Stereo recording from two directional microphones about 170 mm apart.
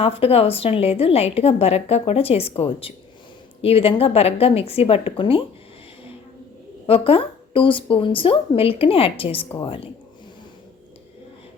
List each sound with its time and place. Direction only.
0.0 s a woman's voice: 35° left (ahead or behind)
6.8 s a woman's voice: 35° left (ahead or behind)